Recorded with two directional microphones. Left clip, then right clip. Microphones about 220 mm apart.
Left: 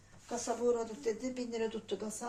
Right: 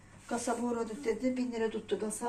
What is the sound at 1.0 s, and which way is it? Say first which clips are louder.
Speech: right 4 dB; 10° left (ahead or behind).